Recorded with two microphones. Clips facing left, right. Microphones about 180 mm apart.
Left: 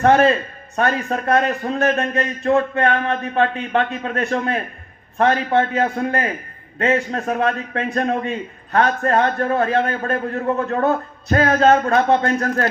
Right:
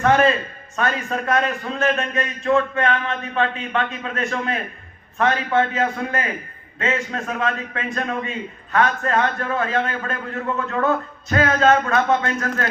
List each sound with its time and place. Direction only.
0.0 s a man's voice: 35° left (ahead or behind)